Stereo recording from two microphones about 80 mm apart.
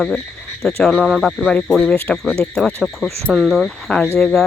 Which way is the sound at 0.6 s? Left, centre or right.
Centre.